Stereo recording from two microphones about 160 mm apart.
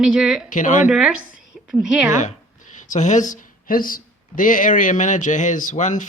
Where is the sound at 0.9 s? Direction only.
5° right (ahead or behind).